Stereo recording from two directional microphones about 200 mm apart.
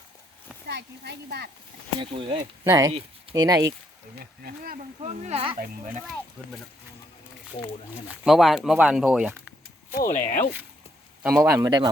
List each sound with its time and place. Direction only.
0.7 s a child's voice: 55° right (ahead or behind)
2.0 s speech: 25° right (ahead or behind)
4.2 s speech: 50° right (ahead or behind)
5.0 s speech: 35° right (ahead or behind)
5.5 s speech: 40° right (ahead or behind)
8.0 s speech: centre (ahead or behind)
9.9 s speech: 45° left (ahead or behind)
11.2 s speech: 10° right (ahead or behind)